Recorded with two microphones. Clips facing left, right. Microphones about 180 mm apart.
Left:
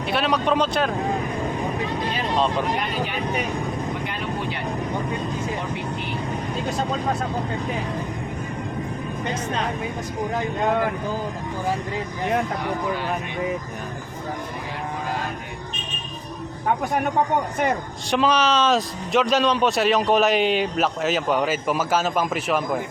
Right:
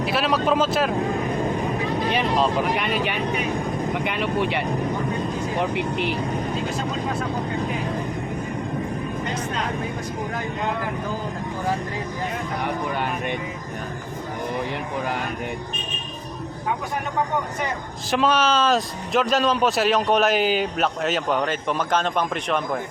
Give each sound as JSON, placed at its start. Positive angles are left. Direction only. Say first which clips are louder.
{"t": 0.0, "sound": "a man's voice", "louder": "right 1 dB", "side_deg": 0}
{"t": 2.3, "sound": "a man's voice", "louder": "left 2 dB", "side_deg": 0}
{"t": 2.7, "sound": "speech", "louder": "right 2 dB", "side_deg": -70}
{"t": 5.7, "sound": "speech", "louder": "right 5 dB", "side_deg": -70}
{"t": 18.1, "sound": "a man's voice", "louder": "even", "side_deg": 0}